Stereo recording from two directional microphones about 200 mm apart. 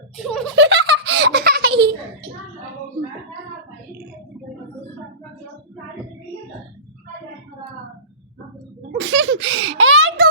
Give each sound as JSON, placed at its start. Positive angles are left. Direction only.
{"t": 0.2, "sound": "speech", "side_deg": 0}
{"t": 0.5, "sound": "giggle", "side_deg": -55}
{"t": 9.0, "sound": "a sound", "side_deg": -65}